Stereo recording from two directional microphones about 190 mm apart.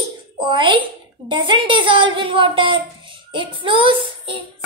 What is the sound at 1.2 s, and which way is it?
A woman's voice, 25° right (ahead or behind).